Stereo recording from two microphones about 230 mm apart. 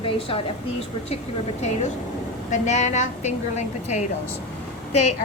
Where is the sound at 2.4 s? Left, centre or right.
Left.